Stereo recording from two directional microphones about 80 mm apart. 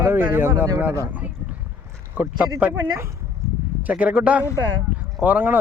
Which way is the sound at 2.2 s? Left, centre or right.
Centre.